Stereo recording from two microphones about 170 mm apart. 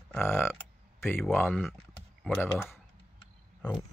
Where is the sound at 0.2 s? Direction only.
15° left (ahead or behind).